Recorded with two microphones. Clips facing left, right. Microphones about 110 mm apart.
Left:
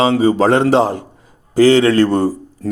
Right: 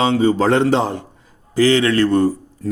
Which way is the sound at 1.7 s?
30° left (ahead or behind).